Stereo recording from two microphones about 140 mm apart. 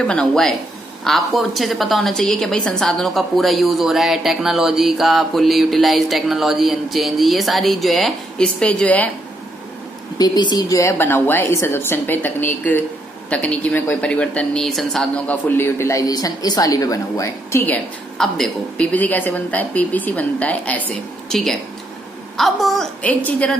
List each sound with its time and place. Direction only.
0.0 s a woman's voice: 5° left (ahead or behind)
10.1 s a woman's voice: 30° left (ahead or behind)
18.1 s a woman's voice: 5° left (ahead or behind)